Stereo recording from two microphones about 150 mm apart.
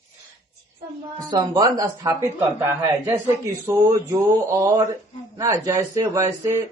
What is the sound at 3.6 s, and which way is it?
A man's voice, 20° right (ahead or behind).